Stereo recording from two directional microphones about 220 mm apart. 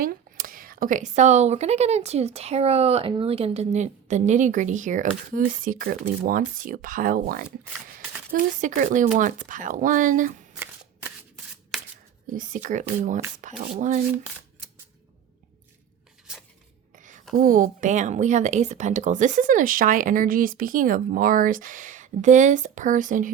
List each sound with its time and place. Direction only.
0.0 s speech: 40° right (ahead or behind)
12.3 s speech: 35° right (ahead or behind)
16.3 s a sound: centre (ahead or behind)
16.9 s whispering: 35° right (ahead or behind)
17.3 s speech: 40° right (ahead or behind)